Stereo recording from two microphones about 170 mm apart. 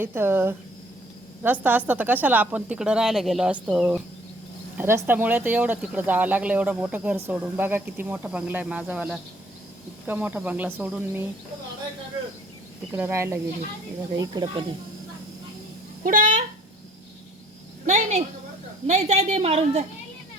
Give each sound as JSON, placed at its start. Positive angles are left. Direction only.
{"t": 0.0, "sound": "speech", "side_deg": -15}
{"t": 1.6, "sound": "speech", "side_deg": -10}
{"t": 12.9, "sound": "speech", "side_deg": -15}
{"t": 14.2, "sound": "speech", "side_deg": -25}
{"t": 16.0, "sound": "a child's voice", "side_deg": -50}
{"t": 17.8, "sound": "cricket", "side_deg": -45}
{"t": 18.9, "sound": "a woman's voice", "side_deg": -40}